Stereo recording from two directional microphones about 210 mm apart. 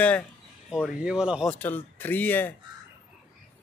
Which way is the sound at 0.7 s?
Centre (ahead or behind).